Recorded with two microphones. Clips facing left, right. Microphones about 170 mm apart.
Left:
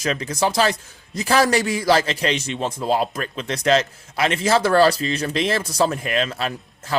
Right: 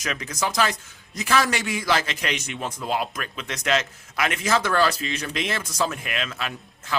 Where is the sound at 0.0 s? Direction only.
30° left (ahead or behind).